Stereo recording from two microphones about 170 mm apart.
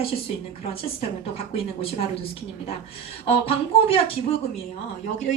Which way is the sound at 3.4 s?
35° left (ahead or behind).